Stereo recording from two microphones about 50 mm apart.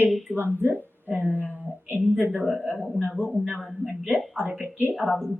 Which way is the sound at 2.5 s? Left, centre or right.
Right.